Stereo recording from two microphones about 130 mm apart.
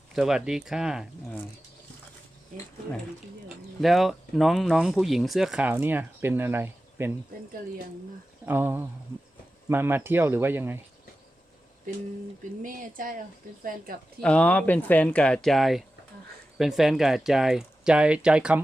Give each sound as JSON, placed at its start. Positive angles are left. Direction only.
{"t": 0.2, "sound": "speech", "side_deg": -5}
{"t": 3.8, "sound": "speech", "side_deg": 0}
{"t": 8.4, "sound": "speech", "side_deg": -15}
{"t": 12.6, "sound": "speech", "side_deg": -90}
{"t": 14.2, "sound": "speech", "side_deg": 10}